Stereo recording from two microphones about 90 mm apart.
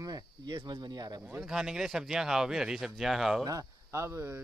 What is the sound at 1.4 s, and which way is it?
Speech, 5° right (ahead or behind).